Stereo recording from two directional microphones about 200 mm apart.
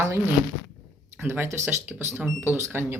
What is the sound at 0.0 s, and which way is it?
Speech, 15° right (ahead or behind).